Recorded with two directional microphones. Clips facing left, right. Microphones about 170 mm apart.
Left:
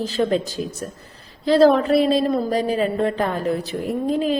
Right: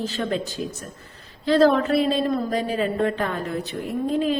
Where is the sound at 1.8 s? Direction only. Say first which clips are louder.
Left 4 dB; 35° left (ahead or behind).